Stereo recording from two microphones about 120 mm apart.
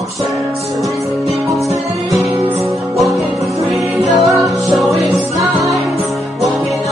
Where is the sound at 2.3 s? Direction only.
40° right (ahead or behind).